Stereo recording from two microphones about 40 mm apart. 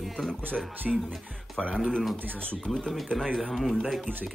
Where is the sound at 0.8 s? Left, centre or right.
Centre.